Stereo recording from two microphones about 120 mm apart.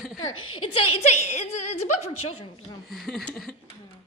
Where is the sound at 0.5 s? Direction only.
55° left (ahead or behind).